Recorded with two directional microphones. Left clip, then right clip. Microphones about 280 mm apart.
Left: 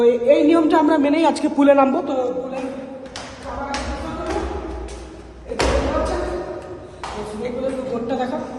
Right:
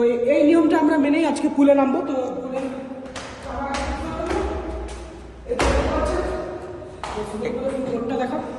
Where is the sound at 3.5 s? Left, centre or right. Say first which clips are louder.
Even; centre.